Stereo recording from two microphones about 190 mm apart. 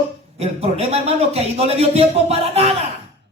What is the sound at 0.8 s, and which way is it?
A man's voice, 35° right (ahead or behind).